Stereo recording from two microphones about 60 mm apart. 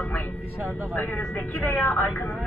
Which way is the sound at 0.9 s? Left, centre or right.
Left.